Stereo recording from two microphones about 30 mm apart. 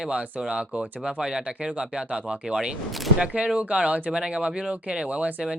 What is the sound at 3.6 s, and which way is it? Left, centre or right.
Speech, right.